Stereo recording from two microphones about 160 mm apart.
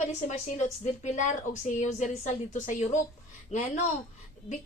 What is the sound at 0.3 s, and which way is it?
A woman's voice, 45° left (ahead or behind).